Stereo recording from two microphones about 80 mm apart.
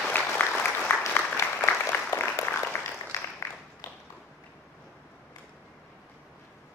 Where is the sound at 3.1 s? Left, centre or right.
Left.